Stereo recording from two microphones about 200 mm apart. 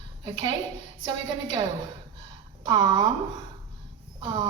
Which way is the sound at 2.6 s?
20° right (ahead or behind).